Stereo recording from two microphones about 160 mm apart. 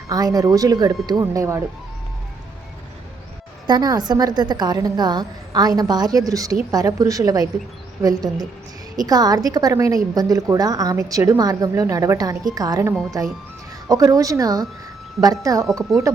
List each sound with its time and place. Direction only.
0.1 s a woman's voice: 25° right (ahead or behind)
3.7 s a woman's voice: 25° right (ahead or behind)
12.9 s speech: centre (ahead or behind)
13.8 s a woman's voice: 20° right (ahead or behind)